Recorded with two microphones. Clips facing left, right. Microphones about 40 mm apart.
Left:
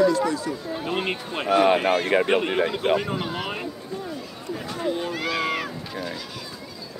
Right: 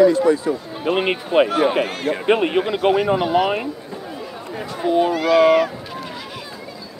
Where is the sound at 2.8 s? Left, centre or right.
Centre.